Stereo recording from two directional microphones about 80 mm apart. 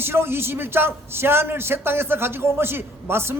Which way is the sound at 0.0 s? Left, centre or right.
Right.